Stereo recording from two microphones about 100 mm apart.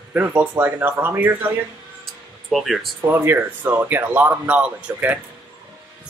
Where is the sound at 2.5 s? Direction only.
Centre (ahead or behind).